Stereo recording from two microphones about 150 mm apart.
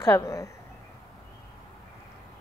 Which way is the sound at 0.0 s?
20° left (ahead or behind).